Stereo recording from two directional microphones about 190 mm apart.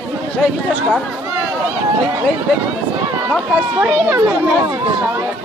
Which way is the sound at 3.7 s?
10° right (ahead or behind).